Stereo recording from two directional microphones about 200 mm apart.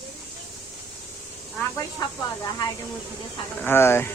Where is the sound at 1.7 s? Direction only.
15° left (ahead or behind).